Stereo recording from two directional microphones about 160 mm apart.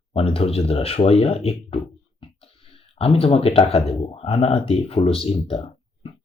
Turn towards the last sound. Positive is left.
turn(degrees=35)  # may be behind; listen again after turning